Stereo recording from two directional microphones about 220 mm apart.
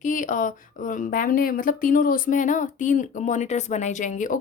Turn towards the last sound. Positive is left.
turn(degrees=35)  # may be behind; listen again after turning